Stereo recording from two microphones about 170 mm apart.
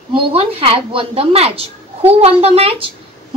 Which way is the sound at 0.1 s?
30° right (ahead or behind).